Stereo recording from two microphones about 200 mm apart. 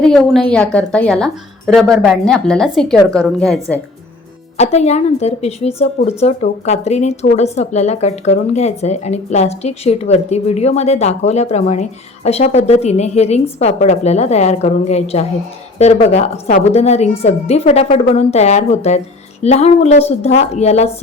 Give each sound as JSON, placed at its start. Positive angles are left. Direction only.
{"t": 0.0, "sound": "a woman's voice", "side_deg": 5}
{"t": 4.5, "sound": "speech", "side_deg": 35}